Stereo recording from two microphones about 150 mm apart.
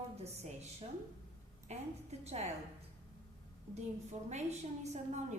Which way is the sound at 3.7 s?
50° right (ahead or behind).